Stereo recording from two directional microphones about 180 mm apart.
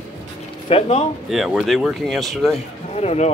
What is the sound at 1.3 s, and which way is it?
Speech, centre (ahead or behind).